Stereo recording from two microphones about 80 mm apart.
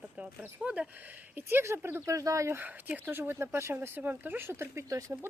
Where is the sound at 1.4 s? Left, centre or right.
Right.